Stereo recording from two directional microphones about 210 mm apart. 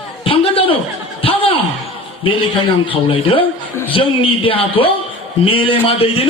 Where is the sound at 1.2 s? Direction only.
25° left (ahead or behind).